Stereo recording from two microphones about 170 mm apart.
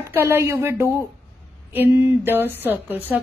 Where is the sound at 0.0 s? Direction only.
15° right (ahead or behind).